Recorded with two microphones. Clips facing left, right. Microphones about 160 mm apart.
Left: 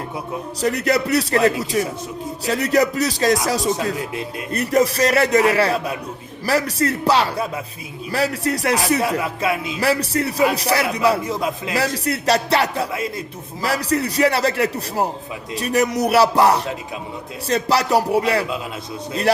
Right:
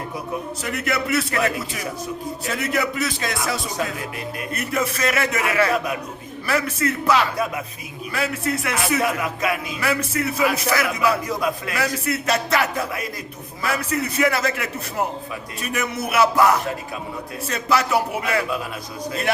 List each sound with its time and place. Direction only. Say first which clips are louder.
0.6 s speech: left 9 dB; 35° left (ahead or behind)